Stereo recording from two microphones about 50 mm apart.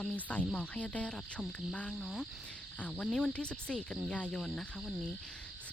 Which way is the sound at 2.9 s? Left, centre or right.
Centre.